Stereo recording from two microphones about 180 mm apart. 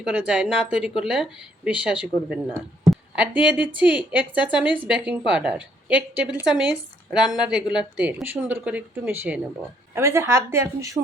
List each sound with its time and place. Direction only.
0.0 s a woman's voice: 5° right (ahead or behind)